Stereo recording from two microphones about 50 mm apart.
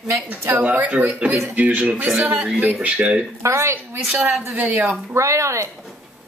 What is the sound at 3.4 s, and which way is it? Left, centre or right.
Speech, right.